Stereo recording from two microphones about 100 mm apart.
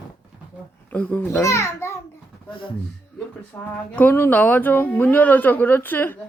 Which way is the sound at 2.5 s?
55° left (ahead or behind).